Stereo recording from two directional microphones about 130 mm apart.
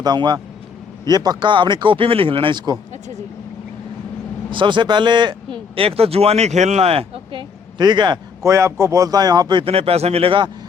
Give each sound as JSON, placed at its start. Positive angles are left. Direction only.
{"t": 0.0, "sound": "a man's voice", "side_deg": -35}
{"t": 4.5, "sound": "speech", "side_deg": -35}
{"t": 7.8, "sound": "a man's voice", "side_deg": -35}
{"t": 8.4, "sound": "a man's voice", "side_deg": -25}